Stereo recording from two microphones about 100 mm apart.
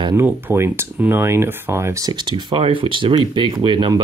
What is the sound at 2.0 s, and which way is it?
Speech, 50° right (ahead or behind).